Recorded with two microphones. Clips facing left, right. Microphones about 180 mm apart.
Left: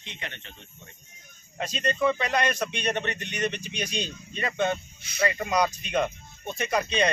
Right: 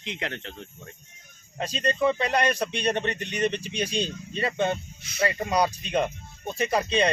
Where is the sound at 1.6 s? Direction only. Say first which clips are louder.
Right 1 dB; 35° right (ahead or behind).